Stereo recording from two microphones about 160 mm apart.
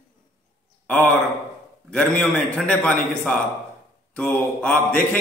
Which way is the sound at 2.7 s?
10° left (ahead or behind).